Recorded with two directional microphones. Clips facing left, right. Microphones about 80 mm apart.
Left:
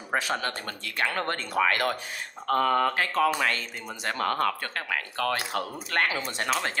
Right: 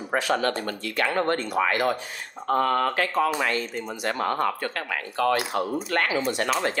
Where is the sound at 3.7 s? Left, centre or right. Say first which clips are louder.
Right 4 dB; right.